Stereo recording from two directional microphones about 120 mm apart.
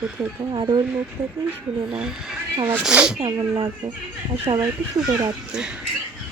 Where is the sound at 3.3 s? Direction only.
40° right (ahead or behind).